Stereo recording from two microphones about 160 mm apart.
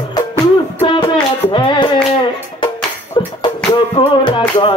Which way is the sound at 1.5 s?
30° left (ahead or behind).